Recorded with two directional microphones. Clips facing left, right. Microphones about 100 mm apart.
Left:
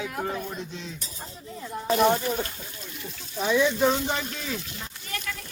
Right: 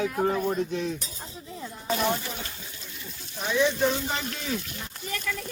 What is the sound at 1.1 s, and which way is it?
Speech, centre (ahead or behind).